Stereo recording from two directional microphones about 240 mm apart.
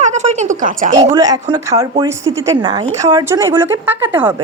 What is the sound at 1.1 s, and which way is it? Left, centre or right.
A woman's voice, centre.